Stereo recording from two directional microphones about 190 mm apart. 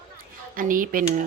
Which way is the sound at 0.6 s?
45° right (ahead or behind).